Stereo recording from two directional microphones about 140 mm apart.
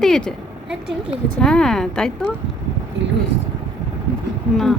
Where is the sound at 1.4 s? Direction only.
5° left (ahead or behind).